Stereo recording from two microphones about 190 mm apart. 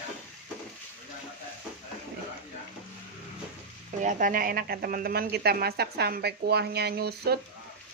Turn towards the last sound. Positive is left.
turn(degrees=-55)  # may be behind; listen again after turning